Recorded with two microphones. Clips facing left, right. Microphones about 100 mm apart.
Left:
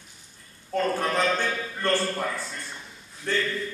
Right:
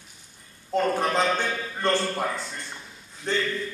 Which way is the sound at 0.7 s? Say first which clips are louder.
Right 2 dB; 20° right (ahead or behind).